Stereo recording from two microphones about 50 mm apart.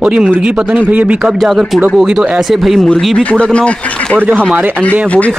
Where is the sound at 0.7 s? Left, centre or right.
Right.